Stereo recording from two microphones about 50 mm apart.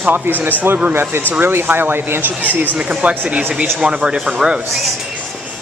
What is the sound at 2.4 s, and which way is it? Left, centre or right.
Speech, right.